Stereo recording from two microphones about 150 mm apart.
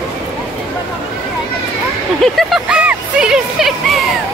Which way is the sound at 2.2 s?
Centre (ahead or behind).